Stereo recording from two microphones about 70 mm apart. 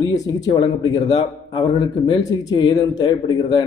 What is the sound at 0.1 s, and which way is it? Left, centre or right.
A man's voice, left.